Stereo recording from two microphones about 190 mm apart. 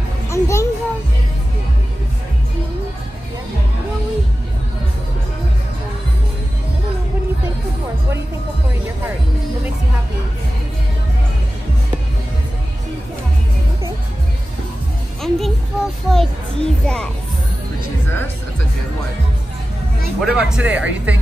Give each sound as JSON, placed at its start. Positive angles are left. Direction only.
{"t": 0.3, "sound": "music", "side_deg": 15}
{"t": 15.2, "sound": "music", "side_deg": 0}
{"t": 20.2, "sound": "music", "side_deg": -5}